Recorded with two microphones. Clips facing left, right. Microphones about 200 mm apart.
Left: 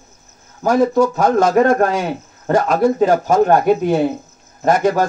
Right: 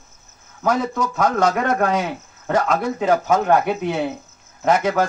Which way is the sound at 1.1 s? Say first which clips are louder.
Left 5 dB; 40° left (ahead or behind).